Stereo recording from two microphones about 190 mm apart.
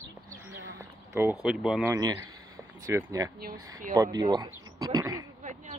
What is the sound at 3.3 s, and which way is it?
Speech, 50° right (ahead or behind).